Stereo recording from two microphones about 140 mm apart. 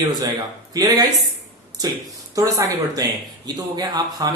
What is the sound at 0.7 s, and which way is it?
Speech, 25° right (ahead or behind).